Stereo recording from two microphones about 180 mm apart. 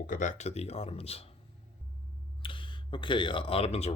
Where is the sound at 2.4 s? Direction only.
30° left (ahead or behind).